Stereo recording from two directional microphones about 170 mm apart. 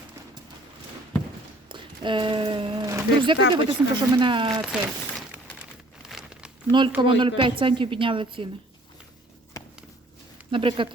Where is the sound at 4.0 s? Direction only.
25° right (ahead or behind).